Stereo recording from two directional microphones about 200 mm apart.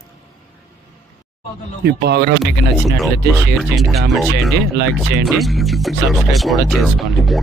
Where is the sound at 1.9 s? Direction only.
55° right (ahead or behind).